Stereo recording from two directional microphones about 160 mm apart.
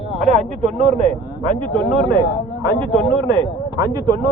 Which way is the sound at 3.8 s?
25° right (ahead or behind).